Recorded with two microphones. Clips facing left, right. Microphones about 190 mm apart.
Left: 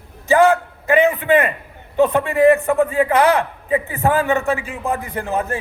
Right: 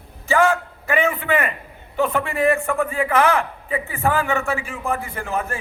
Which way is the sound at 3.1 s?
35° left (ahead or behind).